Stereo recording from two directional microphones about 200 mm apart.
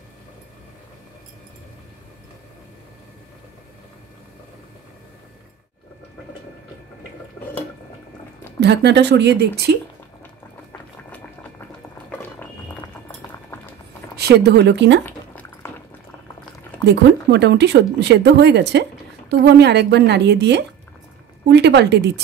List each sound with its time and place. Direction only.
8.5 s speech: 60° right (ahead or behind)
10.7 s music: 5° left (ahead or behind)
14.1 s speech: 55° right (ahead or behind)
15.0 s a sound: 10° left (ahead or behind)
16.8 s speech: 60° right (ahead or behind)